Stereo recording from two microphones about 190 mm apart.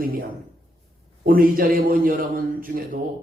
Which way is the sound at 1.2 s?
50° right (ahead or behind).